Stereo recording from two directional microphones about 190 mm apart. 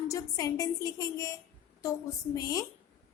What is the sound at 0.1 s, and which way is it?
A woman's voice, 20° left (ahead or behind).